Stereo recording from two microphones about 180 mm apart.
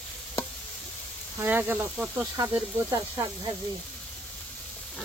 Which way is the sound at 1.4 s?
10° right (ahead or behind).